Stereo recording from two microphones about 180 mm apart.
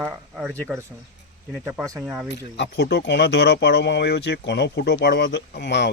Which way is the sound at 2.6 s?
65° left (ahead or behind).